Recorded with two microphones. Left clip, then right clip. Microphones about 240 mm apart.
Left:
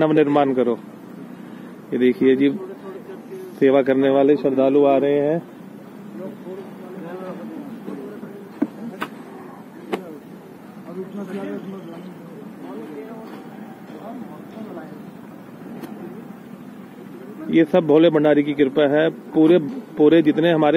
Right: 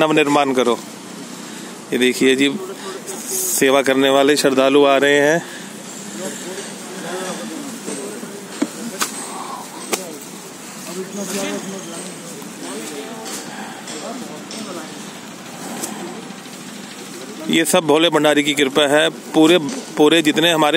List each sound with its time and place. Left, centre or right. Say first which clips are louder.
0.0 s a man's voice: right 2 dB; centre
1.9 s a man's voice: right 2 dB; centre
3.5 s speech: right 1 dB; right
17.5 s speech: right 1 dB; right